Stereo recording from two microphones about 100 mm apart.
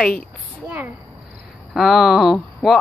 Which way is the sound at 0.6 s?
20° right (ahead or behind).